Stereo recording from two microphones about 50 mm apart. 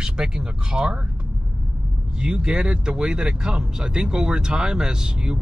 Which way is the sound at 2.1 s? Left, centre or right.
Centre.